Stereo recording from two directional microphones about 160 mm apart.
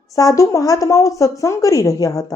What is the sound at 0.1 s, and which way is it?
Speech, 20° left (ahead or behind).